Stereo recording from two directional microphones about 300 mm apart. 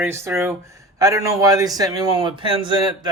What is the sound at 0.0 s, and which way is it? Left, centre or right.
Speech, centre.